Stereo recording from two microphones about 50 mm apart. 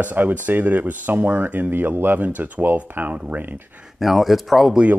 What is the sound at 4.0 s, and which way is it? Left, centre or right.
Speech, centre.